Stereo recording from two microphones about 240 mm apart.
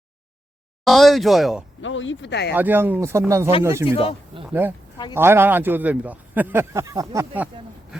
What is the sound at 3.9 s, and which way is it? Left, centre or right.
Speech, left.